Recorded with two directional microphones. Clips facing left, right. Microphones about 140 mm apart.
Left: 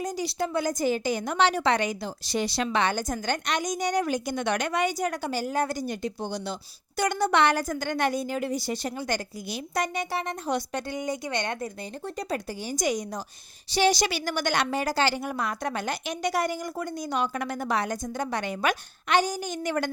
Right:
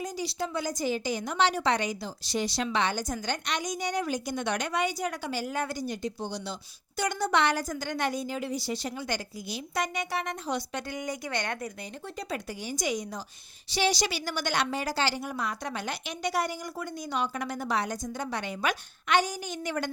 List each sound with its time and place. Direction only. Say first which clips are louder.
0.0 s a woman's voice: left 4 dB; 50° left (ahead or behind); by 10.3 s 35° left (ahead or behind)
10.4 s a woman's voice: left 4 dB; 50° left (ahead or behind)
10.8 s a woman's voice: left 4 dB; 25° left (ahead or behind)
12.0 s a woman's voice: left 4 dB; 40° left (ahead or behind)
19.0 s a woman's voice: left 2 dB; 35° left (ahead or behind)